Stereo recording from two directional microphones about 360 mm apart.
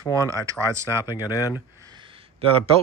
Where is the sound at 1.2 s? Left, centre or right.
Centre.